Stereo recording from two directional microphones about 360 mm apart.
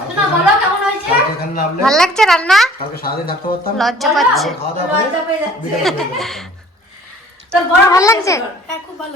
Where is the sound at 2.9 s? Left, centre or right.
Left.